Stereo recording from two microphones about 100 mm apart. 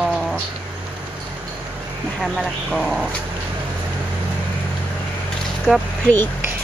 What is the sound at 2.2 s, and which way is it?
Speech, centre (ahead or behind).